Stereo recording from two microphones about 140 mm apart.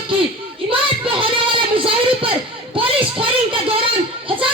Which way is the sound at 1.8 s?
40° right (ahead or behind).